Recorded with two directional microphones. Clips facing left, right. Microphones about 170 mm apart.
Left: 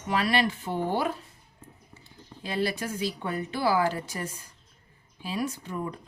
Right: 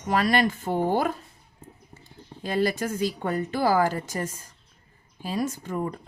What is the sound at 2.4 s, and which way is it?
Speech, 45° right (ahead or behind).